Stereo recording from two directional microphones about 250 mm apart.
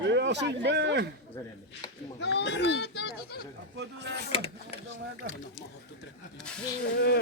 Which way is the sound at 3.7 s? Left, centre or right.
Right.